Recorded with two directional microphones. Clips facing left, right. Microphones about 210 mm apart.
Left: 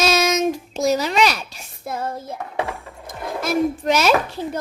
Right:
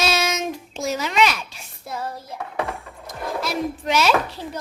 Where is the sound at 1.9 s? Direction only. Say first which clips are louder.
Left 4 dB; 50° left (ahead or behind).